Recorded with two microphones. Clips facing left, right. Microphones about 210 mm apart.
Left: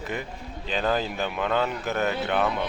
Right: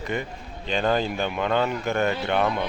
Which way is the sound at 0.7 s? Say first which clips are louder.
Right 2 dB; centre (ahead or behind).